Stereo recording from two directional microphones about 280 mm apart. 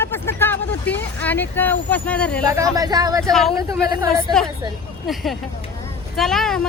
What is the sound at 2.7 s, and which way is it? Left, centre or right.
Speech, centre.